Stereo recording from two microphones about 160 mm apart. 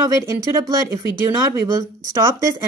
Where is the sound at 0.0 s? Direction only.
15° right (ahead or behind).